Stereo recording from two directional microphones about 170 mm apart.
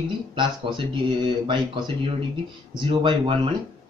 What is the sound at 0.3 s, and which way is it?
Speech, 30° right (ahead or behind).